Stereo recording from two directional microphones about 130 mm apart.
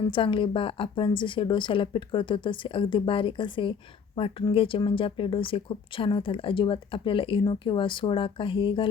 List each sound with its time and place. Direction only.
0.0 s a woman's voice: 40° left (ahead or behind)